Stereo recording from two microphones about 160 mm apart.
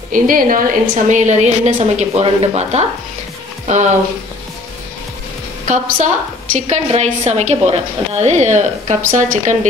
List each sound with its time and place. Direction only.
0.1 s a woman's voice: 60° right (ahead or behind)
5.7 s a woman's voice: 55° right (ahead or behind)